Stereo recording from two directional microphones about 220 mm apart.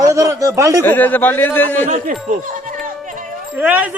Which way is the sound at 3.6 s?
5° right (ahead or behind).